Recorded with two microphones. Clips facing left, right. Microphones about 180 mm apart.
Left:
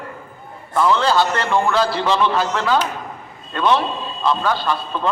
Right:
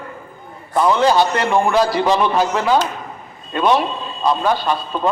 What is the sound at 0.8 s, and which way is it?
A man's voice, 15° right (ahead or behind).